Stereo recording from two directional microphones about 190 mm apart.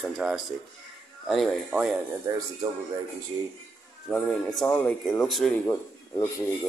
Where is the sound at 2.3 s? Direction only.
15° right (ahead or behind).